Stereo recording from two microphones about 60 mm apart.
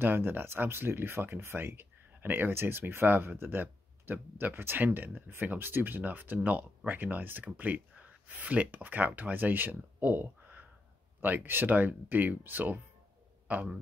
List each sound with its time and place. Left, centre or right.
0.0 s a man's voice: right